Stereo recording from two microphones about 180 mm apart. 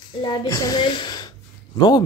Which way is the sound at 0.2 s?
25° left (ahead or behind).